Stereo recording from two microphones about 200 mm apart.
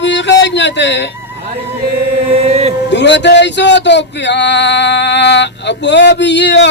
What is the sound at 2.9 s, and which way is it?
Male singing, 60° left (ahead or behind).